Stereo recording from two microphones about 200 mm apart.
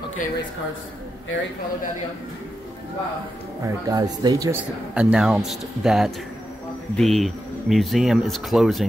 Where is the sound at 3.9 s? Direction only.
20° right (ahead or behind).